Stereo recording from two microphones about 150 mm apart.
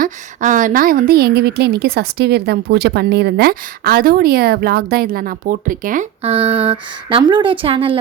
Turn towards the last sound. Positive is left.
turn(degrees=-35)  # may be behind; listen again after turning